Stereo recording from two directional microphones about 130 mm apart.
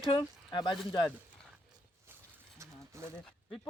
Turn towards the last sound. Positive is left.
turn(degrees=-20)  # may be behind; listen again after turning